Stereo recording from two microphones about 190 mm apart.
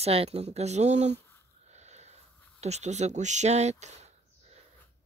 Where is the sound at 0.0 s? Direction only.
30° right (ahead or behind).